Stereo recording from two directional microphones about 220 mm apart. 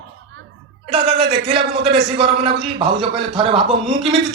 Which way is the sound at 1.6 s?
25° right (ahead or behind).